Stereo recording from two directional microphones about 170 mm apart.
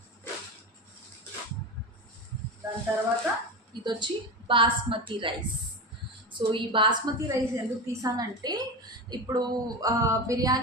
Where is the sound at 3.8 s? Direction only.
25° right (ahead or behind).